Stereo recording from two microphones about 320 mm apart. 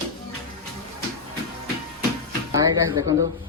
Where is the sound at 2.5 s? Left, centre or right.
Centre.